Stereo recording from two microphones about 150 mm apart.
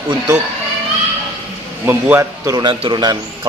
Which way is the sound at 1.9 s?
15° right (ahead or behind).